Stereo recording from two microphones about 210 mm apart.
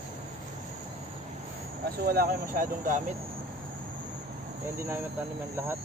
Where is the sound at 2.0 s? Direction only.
45° right (ahead or behind).